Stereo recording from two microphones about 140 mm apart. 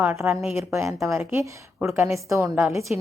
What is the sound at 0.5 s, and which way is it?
A woman's voice, 20° right (ahead or behind).